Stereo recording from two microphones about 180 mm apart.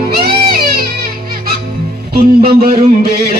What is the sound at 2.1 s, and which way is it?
Music, 60° right (ahead or behind).